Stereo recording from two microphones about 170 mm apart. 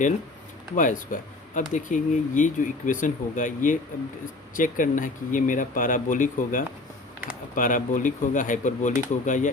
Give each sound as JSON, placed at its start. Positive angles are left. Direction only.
{"t": 0.8, "sound": "speech", "side_deg": 50}